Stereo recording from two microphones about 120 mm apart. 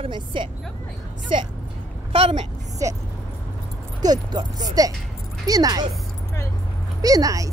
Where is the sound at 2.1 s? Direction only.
55° right (ahead or behind).